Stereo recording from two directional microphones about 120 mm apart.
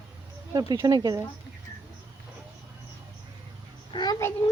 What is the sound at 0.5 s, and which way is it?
Speech, 30° right (ahead or behind).